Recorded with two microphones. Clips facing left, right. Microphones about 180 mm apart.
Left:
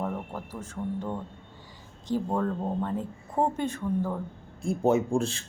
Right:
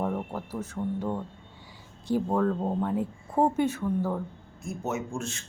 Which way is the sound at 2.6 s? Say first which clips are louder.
Right 2 dB; 10° right (ahead or behind).